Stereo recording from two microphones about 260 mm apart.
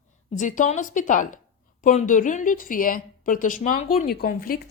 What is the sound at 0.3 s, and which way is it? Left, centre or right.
A woman's voice, left.